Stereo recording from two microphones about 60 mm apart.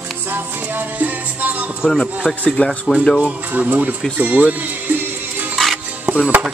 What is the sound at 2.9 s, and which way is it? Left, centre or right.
Speech, centre.